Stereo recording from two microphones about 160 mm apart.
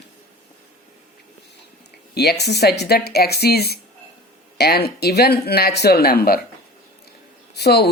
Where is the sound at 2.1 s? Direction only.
90° left; by 6.4 s 70° left (ahead or behind).